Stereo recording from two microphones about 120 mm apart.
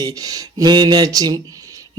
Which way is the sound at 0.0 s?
30° right (ahead or behind).